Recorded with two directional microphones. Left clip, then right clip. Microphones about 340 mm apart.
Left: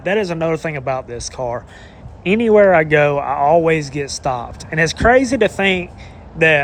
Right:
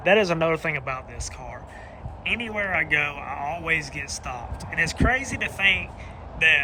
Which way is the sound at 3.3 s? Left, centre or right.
Left.